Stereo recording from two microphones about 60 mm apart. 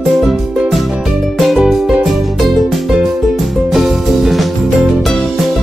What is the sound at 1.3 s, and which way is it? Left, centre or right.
Music, centre.